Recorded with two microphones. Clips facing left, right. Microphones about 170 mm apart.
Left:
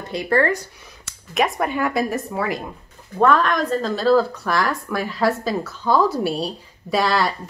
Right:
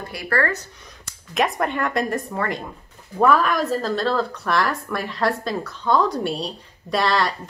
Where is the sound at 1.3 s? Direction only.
Centre (ahead or behind).